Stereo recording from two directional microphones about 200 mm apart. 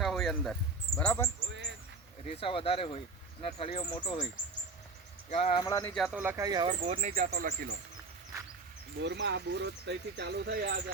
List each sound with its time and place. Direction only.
0.0 s a sound: centre (ahead or behind)
0.9 s speech: 5° left (ahead or behind)
2.3 s speech: 25° left (ahead or behind)
5.3 s speech: 30° left (ahead or behind)
5.6 s speech: 15° left (ahead or behind)
5.9 s speech: 5° right (ahead or behind); by 6.7 s 20° right (ahead or behind)
6.8 s speech: 30° right (ahead or behind)
7.1 s speech: 45° right (ahead or behind)
9.0 s speech: 60° right (ahead or behind)